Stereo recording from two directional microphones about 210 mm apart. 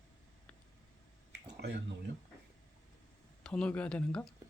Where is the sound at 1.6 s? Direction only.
55° right (ahead or behind).